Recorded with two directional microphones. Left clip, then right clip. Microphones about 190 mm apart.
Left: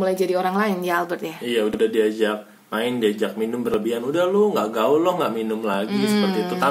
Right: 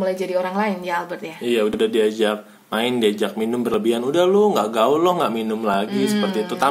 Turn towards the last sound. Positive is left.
turn(degrees=40)  # may be behind; listen again after turning